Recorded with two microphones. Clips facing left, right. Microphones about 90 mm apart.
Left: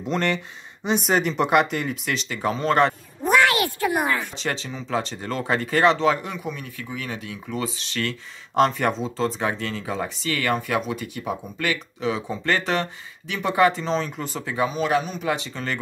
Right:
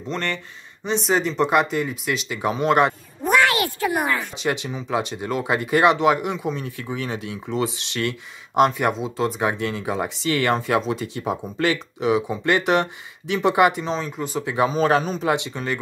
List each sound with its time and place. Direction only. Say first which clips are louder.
0.0 s speech: left 3 dB; 10° left (ahead or behind); by 2.9 s 15° right (ahead or behind)
4.4 s speech: right 4 dB; 15° right (ahead or behind)
14.4 s speech: right 4 dB; 25° right (ahead or behind)
15.2 s speech: right 3 dB; 20° right (ahead or behind)